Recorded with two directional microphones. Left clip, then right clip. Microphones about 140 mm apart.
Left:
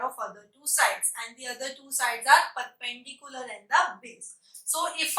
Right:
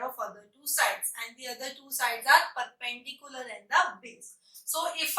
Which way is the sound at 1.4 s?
15° left (ahead or behind).